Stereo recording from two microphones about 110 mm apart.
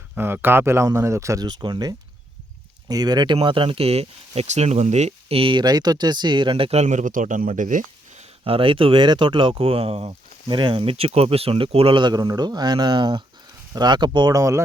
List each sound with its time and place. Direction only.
0.2 s speech: 20° right (ahead or behind); by 3.3 s 40° right (ahead or behind)
3.4 s speech: 50° right (ahead or behind)
6.7 s speech: 85° right
8.4 s speech: 55° right (ahead or behind)
10.1 s speech: 50° right (ahead or behind); by 14.6 s 30° right (ahead or behind)